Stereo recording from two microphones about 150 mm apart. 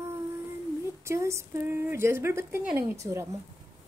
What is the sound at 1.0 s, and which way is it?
A woman's voice, 20° right (ahead or behind).